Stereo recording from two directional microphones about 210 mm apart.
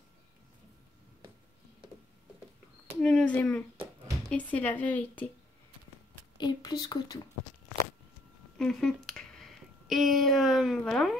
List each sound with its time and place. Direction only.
3.0 s speech: 5° left (ahead or behind)
6.3 s speech: 20° left (ahead or behind)
8.5 s speech: 5° left (ahead or behind)